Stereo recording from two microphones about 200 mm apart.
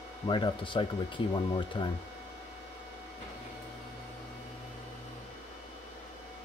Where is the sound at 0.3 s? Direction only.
25° left (ahead or behind).